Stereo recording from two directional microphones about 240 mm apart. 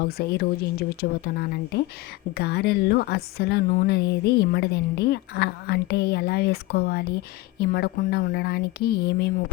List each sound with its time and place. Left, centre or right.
0.0 s a woman's voice: left